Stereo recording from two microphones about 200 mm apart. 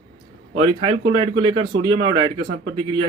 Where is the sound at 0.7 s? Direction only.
25° right (ahead or behind).